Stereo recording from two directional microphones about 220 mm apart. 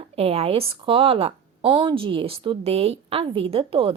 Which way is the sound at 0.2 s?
25° right (ahead or behind).